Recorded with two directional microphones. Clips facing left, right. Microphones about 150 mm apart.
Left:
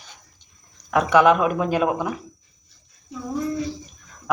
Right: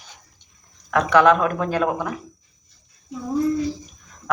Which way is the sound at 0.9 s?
10° left (ahead or behind).